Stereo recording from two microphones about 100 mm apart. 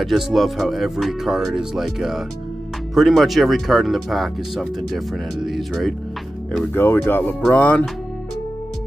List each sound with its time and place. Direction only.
0.0 s speech: centre (ahead or behind)
6.7 s speech: 20° left (ahead or behind)